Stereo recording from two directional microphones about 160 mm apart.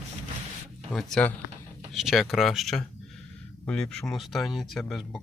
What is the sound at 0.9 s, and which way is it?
Speech, 5° left (ahead or behind).